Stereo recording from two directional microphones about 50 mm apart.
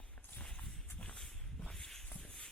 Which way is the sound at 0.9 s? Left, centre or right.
Left.